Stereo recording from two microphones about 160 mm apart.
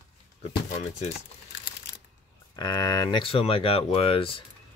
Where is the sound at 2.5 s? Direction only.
25° left (ahead or behind).